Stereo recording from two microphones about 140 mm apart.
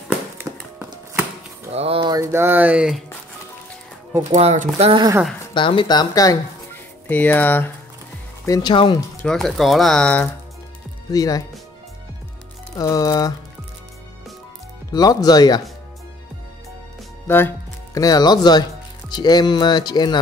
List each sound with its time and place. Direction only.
0.5 s a sound: 20° right (ahead or behind)
1.7 s speech: 45° right (ahead or behind)
2.0 s a sound: 30° right (ahead or behind)
2.3 s speech: 15° right (ahead or behind)
4.2 s speech: 50° right (ahead or behind)
5.5 s speech: 35° left (ahead or behind)
7.1 s speech: 15° left (ahead or behind)
8.5 s speech: 35° left (ahead or behind)
9.2 s speech: 5° left (ahead or behind)
11.1 s speech: 25° left (ahead or behind)
12.7 s speech: 25° left (ahead or behind)
14.9 s speech: 25° left (ahead or behind)
17.3 s speech: 15° left (ahead or behind)